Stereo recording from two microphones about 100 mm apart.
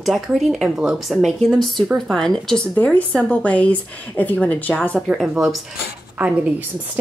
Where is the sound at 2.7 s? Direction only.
15° left (ahead or behind); by 5.6 s 5° right (ahead or behind).